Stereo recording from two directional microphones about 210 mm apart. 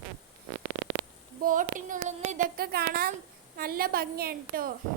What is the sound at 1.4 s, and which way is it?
A woman's voice, 40° right (ahead or behind).